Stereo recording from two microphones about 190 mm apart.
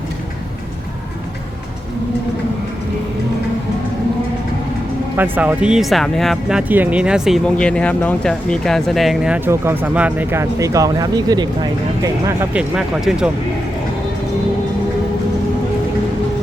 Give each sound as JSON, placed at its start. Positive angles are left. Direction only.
{"t": 5.1, "sound": "speech", "side_deg": -10}
{"t": 12.5, "sound": "speech", "side_deg": -5}